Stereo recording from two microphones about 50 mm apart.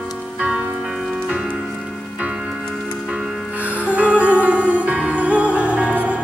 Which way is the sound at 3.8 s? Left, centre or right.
Right.